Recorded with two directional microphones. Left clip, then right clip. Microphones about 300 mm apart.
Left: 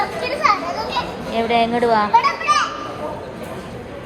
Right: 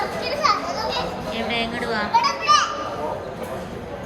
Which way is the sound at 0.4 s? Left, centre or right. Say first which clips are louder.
Left 3 dB; left.